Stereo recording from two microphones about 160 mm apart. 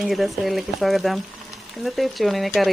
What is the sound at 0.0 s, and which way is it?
Speech, centre (ahead or behind).